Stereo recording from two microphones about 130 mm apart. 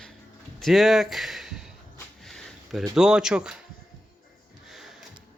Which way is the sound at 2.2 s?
Centre (ahead or behind).